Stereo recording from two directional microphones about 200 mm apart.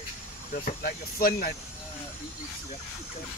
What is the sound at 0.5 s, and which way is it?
Speech, 45° left (ahead or behind).